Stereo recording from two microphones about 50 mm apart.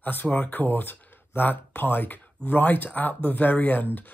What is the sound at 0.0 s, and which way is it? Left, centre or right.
Speech, left.